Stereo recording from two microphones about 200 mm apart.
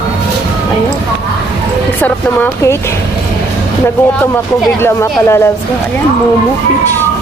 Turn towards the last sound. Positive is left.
turn(degrees=15)  # may be behind; listen again after turning